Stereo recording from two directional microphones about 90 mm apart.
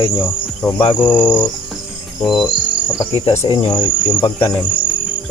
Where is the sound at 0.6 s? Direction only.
20° left (ahead or behind).